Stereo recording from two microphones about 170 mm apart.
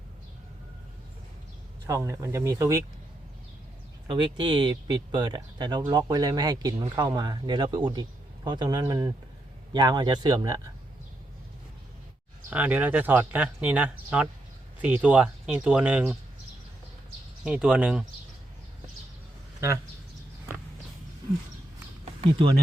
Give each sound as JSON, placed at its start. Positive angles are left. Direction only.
{"t": 1.9, "sound": "speech", "side_deg": -20}
{"t": 4.0, "sound": "speech", "side_deg": -30}
{"t": 12.5, "sound": "speech", "side_deg": -10}
{"t": 17.4, "sound": "speech", "side_deg": -5}